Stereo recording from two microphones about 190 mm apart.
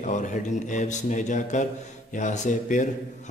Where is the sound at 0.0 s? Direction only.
40° left (ahead or behind).